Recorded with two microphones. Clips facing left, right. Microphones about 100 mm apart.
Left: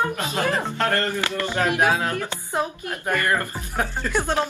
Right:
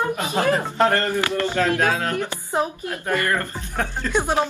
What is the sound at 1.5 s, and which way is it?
Speech, 15° left (ahead or behind).